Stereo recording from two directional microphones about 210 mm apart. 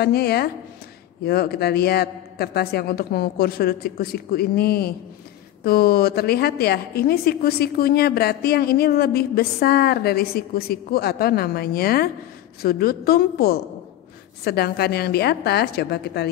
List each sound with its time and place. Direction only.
0.0 s a woman's voice: 50° left (ahead or behind)